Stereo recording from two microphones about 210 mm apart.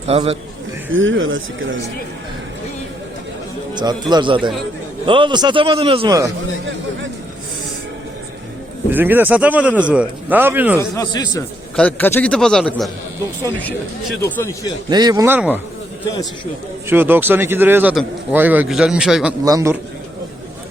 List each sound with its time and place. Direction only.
0.1 s a man's voice: 30° right (ahead or behind)
0.9 s speech: 65° right (ahead or behind)
4.1 s a man's voice: 20° right (ahead or behind)
8.9 s a man's voice: 10° right (ahead or behind)
10.8 s speech: 15° left (ahead or behind)
11.8 s a man's voice: 5° left (ahead or behind)
14.8 s a man's voice: 20° right (ahead or behind)
16.9 s a man's voice: 10° right (ahead or behind)
19.5 s a man's voice: 15° right (ahead or behind)